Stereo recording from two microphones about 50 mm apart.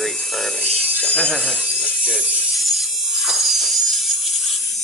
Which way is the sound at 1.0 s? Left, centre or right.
Left.